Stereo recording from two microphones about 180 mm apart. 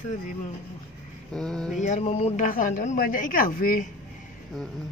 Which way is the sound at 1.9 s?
35° left (ahead or behind).